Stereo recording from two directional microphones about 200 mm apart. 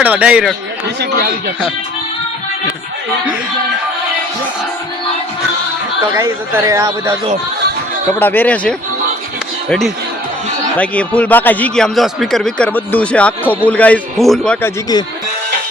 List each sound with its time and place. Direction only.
0.0 s speech: 5° right (ahead or behind)
6.1 s speech: 15° right (ahead or behind)
8.2 s a man's voice: 10° left (ahead or behind)